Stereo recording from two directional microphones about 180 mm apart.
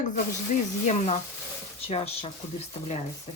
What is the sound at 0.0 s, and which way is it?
Speech, 40° left (ahead or behind).